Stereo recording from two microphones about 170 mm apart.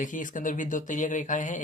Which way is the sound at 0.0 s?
50° left (ahead or behind).